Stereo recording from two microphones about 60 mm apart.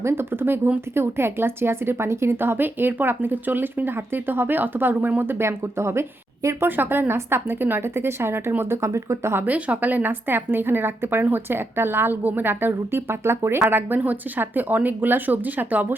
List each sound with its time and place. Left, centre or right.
0.0 s a woman's voice: right
6.7 s a woman's voice: right
9.5 s a woman's voice: right